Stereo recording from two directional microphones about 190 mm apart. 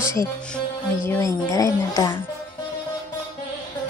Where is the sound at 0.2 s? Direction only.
15° left (ahead or behind).